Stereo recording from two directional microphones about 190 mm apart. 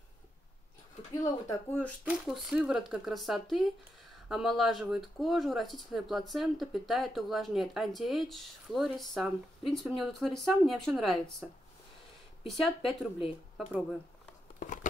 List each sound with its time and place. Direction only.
1.2 s speech: 10° left (ahead or behind)
2.0 s speech: 5° right (ahead or behind)
12.4 s speech: centre (ahead or behind)
14.6 s a sound: 45° left (ahead or behind)